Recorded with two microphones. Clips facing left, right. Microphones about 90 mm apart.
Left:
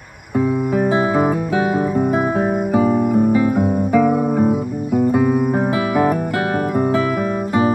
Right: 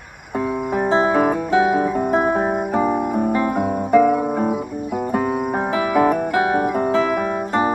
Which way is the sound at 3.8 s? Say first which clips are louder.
Right 3 dB; 5° left (ahead or behind).